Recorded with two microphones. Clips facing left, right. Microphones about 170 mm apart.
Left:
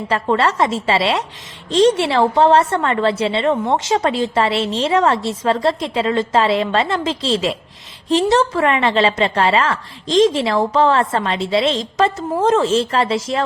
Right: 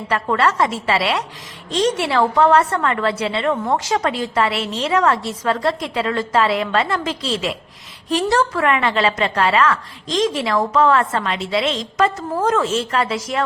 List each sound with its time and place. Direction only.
0.1 s a woman's voice: 25° left (ahead or behind)